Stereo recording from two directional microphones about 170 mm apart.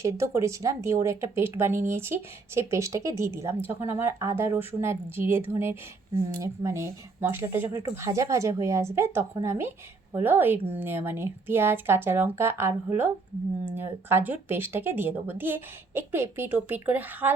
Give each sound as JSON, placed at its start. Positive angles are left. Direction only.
{"t": 0.0, "sound": "a woman's voice", "side_deg": -15}